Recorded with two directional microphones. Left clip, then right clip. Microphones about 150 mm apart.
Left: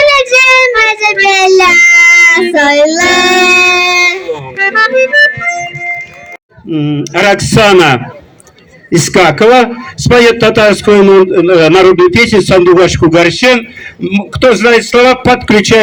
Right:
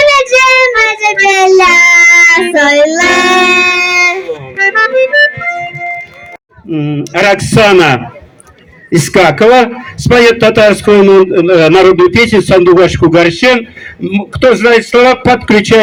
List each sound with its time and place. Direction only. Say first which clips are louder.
0.0 s child singing: even; 20° left (ahead or behind)
6.7 s a man's voice: left 2 dB; 15° left (ahead or behind); by 15.8 s 35° left (ahead or behind)